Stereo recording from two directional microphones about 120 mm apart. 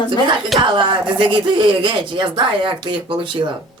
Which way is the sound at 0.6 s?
40° right (ahead or behind).